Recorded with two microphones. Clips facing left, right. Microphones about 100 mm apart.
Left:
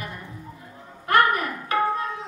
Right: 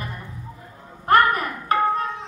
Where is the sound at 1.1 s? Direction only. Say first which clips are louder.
Right 3 dB; 40° right (ahead or behind).